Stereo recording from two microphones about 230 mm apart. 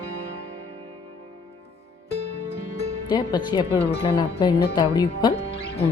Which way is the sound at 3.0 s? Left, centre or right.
Centre.